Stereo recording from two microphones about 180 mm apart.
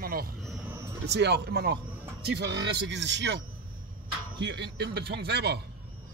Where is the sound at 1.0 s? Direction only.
70° right (ahead or behind).